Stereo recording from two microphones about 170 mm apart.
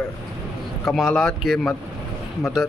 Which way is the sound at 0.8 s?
Centre (ahead or behind).